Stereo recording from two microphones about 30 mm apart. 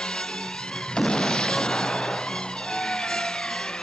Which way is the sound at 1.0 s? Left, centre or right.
Left.